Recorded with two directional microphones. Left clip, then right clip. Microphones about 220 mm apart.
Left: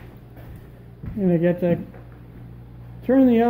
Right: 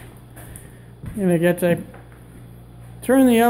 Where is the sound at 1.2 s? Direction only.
5° right (ahead or behind).